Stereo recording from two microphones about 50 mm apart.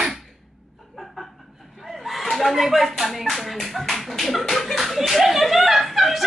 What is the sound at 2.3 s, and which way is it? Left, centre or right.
Music, centre.